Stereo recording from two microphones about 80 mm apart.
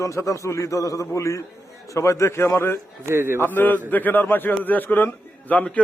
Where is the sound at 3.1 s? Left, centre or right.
Right.